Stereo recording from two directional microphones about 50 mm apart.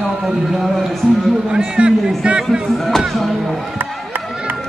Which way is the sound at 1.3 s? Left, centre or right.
Centre.